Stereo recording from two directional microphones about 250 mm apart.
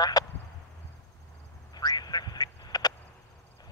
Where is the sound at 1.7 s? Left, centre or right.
Centre.